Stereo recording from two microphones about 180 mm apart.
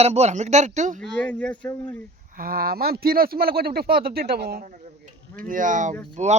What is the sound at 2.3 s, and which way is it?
A man's voice, 55° right (ahead or behind).